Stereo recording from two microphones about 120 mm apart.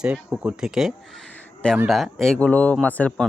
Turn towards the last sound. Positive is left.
turn(degrees=10)  # may be behind; listen again after turning